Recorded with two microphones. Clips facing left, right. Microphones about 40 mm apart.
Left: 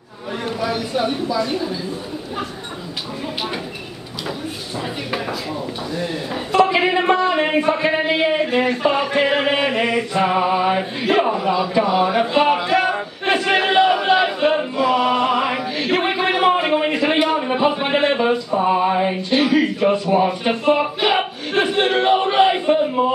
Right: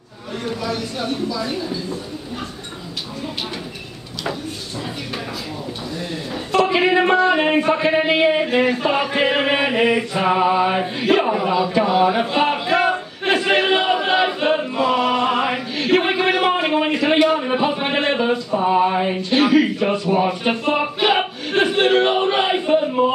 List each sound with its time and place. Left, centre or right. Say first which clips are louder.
0.5 s speech: left 2 dB; centre
6.5 s speech: even; centre
13.2 s chant: even; centre
15.2 s chant: left 1 dB; centre
15.8 s a sound: right 3 dB; centre
19.8 s speech: left 2 dB; centre